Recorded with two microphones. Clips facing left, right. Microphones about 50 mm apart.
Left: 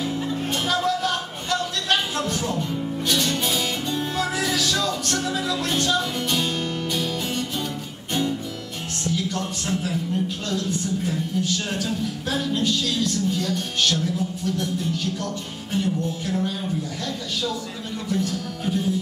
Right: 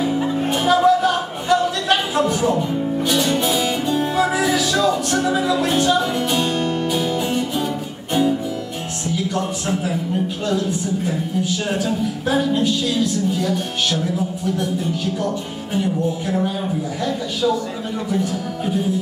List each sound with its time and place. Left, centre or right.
0.2 s music: right
9.0 s speech: centre